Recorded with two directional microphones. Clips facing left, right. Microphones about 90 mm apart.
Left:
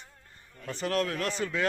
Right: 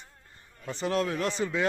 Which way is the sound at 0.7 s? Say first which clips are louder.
Right 1 dB; 20° right (ahead or behind).